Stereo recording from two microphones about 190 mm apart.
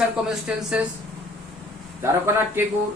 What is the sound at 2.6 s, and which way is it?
Speech, 10° right (ahead or behind).